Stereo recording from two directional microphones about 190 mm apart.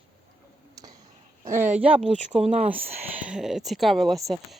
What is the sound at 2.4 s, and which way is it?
Speech, 35° right (ahead or behind).